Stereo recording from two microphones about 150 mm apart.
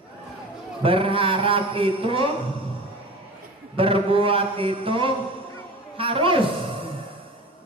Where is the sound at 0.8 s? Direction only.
35° right (ahead or behind).